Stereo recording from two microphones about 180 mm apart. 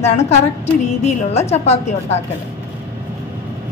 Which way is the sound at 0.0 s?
40° left (ahead or behind).